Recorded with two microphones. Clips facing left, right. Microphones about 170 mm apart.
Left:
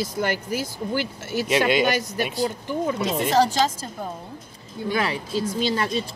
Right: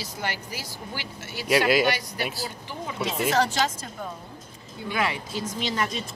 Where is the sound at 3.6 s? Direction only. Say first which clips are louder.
Left 4 dB; 30° left (ahead or behind).